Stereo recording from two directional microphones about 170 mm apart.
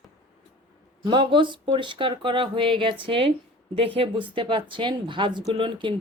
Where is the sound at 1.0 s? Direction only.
30° right (ahead or behind).